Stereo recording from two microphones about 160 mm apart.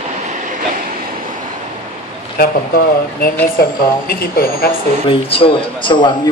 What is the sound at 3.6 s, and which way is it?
Speech, 70° left (ahead or behind).